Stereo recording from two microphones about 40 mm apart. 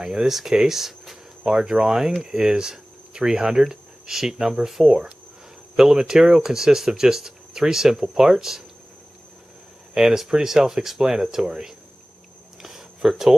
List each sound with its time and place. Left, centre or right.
0.0 s speech: centre
0.3 s speech: centre
9.9 s speech: centre
12.6 s a sound: centre